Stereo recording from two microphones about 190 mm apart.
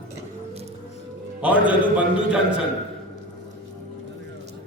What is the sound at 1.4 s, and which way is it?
A man's voice, 5° right (ahead or behind).